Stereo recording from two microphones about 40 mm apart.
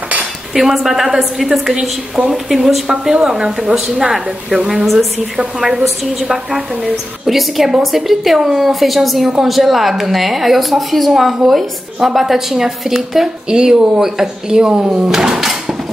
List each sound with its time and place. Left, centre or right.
0.6 s a woman's voice: centre
3.1 s a woman's voice: centre
5.6 s a woman's voice: centre
7.2 s a woman's voice: centre
13.5 s a woman's voice: right